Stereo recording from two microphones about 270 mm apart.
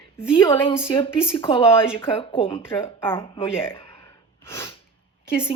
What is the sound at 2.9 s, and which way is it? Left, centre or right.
Speech, centre.